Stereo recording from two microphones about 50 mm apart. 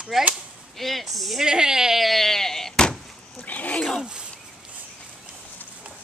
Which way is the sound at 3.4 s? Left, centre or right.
Left.